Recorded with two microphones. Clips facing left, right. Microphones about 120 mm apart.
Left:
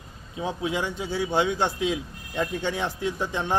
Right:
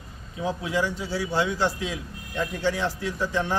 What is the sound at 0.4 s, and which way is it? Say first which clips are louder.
A man's voice: right 1 dB; 20° left (ahead or behind).